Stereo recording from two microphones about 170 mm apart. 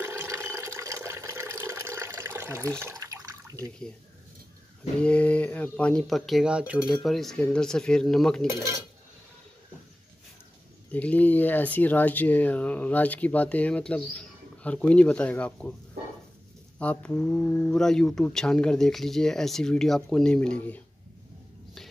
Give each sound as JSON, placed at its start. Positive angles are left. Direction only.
{"t": 0.0, "sound": "water", "side_deg": -15}
{"t": 5.0, "sound": "speech", "side_deg": 5}
{"t": 10.9, "sound": "speech", "side_deg": 10}
{"t": 16.7, "sound": "speech", "side_deg": 10}